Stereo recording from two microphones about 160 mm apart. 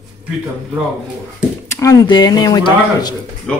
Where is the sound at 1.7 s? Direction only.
20° left (ahead or behind).